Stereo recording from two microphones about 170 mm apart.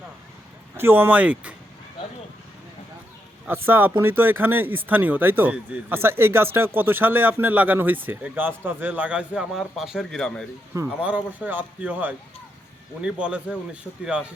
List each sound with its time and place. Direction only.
0.8 s speech: 10° right (ahead or behind)
3.4 s speech: 10° right (ahead or behind); by 10.4 s 5° left (ahead or behind)
11.0 s speech: 10° right (ahead or behind)